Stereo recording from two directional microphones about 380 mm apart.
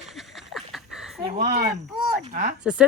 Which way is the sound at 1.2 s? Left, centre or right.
Centre.